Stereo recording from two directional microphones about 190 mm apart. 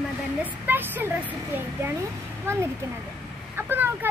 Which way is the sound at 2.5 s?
15° right (ahead or behind).